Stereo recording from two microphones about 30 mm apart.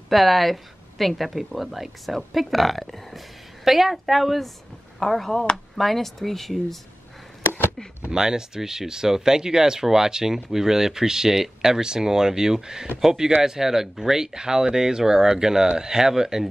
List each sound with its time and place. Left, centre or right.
0.1 s speech: centre
8.1 s speech: right